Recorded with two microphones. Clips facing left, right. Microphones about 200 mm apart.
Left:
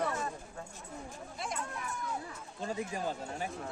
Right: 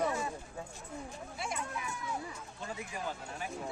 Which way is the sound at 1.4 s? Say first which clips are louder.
Even; 5° right (ahead or behind).